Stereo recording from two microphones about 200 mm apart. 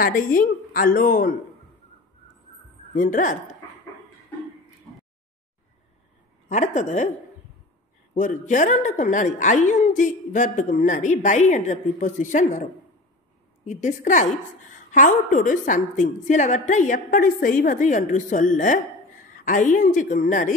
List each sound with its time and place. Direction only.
0.0 s a woman's voice: 45° left (ahead or behind)
2.9 s a woman's voice: 40° left (ahead or behind)
6.5 s a woman's voice: 35° left (ahead or behind)
8.2 s a woman's voice: 40° left (ahead or behind)
13.7 s a woman's voice: 40° left (ahead or behind)